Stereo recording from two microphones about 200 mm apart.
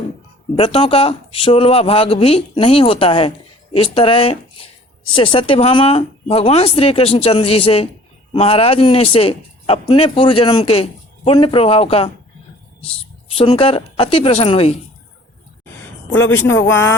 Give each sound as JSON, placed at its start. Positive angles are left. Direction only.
{"t": 0.5, "sound": "a man's voice", "side_deg": 30}
{"t": 13.3, "sound": "a man's voice", "side_deg": 30}
{"t": 16.5, "sound": "speech", "side_deg": 80}